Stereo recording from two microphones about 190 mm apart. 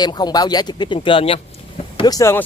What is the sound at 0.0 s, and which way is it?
Speech, 20° left (ahead or behind).